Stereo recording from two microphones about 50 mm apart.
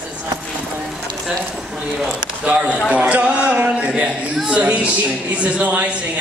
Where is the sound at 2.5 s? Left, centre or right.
Right.